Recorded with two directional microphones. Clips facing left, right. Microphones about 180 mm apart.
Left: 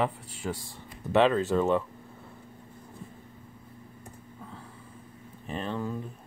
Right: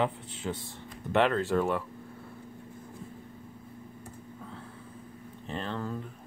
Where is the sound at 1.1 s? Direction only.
15° left (ahead or behind).